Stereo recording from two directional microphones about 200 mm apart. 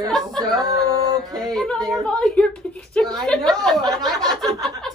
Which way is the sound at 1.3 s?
Centre (ahead or behind).